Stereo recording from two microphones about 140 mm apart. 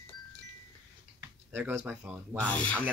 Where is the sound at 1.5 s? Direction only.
15° right (ahead or behind).